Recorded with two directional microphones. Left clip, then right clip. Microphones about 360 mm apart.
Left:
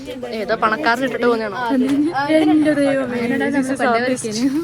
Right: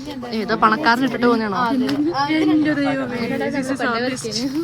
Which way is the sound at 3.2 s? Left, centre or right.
Centre.